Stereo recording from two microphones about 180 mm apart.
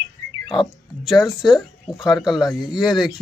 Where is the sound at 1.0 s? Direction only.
Centre (ahead or behind).